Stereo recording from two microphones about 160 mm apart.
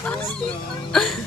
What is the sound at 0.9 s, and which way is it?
Speech, centre (ahead or behind).